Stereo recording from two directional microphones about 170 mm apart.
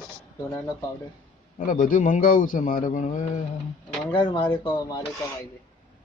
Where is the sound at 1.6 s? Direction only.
50° left (ahead or behind).